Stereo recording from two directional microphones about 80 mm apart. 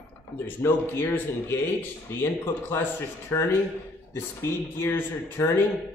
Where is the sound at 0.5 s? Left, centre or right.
Left.